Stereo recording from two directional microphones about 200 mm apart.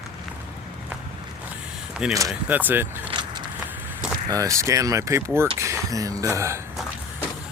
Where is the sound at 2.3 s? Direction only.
5° right (ahead or behind).